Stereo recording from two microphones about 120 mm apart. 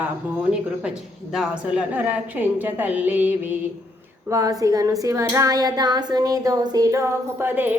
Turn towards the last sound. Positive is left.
turn(degrees=-15)  # may be behind; listen again after turning